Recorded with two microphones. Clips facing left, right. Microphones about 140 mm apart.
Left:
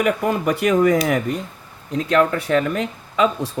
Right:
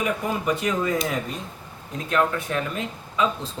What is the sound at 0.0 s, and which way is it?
Speech, 70° left (ahead or behind).